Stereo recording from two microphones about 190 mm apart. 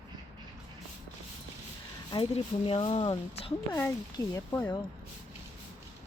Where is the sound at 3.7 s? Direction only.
15° left (ahead or behind).